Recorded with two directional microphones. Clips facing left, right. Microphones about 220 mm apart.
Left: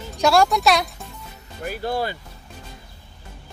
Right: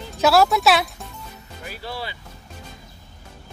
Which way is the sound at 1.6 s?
50° left (ahead or behind).